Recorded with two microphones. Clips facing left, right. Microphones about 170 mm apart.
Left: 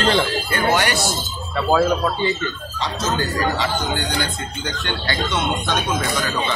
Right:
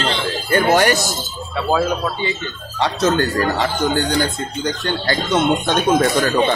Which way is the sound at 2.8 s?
65° right (ahead or behind).